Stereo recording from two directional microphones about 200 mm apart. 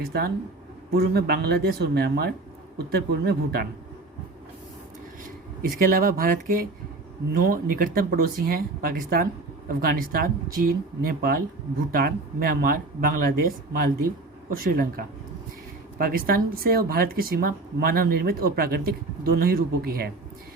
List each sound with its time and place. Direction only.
0.0 s speech: 50° right (ahead or behind)
5.6 s speech: 45° right (ahead or behind)